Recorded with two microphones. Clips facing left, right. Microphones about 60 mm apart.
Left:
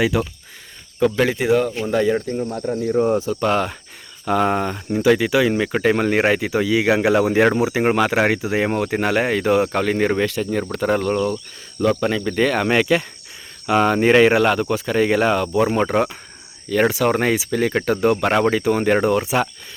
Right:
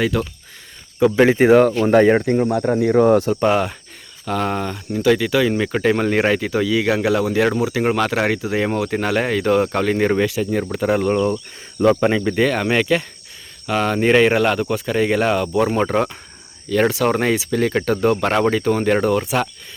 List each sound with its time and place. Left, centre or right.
0.0 s speech: centre
0.9 s speech: centre
1.4 s speech: right
2.3 s speech: right
3.5 s speech: centre
4.3 s speech: centre
11.8 s cricket: right
12.4 s speech: centre